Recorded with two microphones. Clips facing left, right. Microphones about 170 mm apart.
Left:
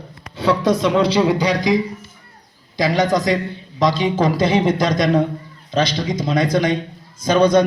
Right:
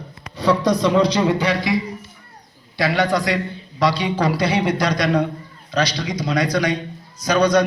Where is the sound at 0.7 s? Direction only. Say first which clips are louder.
Even; 25° left (ahead or behind).